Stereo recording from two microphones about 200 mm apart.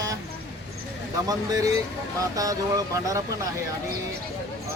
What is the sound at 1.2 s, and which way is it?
Speech, 20° right (ahead or behind).